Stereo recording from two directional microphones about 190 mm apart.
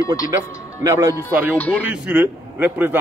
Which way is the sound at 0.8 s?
15° right (ahead or behind).